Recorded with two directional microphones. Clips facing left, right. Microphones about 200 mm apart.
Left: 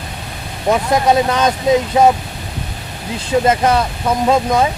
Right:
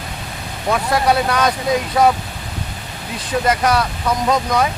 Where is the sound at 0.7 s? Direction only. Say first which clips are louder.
Left 3 dB; 20° left (ahead or behind).